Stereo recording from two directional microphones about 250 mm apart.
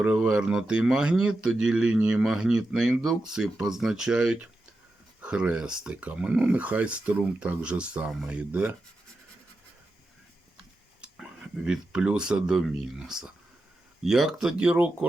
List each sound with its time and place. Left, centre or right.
0.0 s speech: centre
11.0 s speech: centre